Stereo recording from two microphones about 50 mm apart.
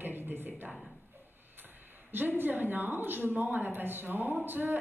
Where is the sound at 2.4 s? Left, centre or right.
Right.